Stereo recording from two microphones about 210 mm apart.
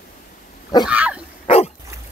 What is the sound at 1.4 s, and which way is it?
Dog, 30° left (ahead or behind).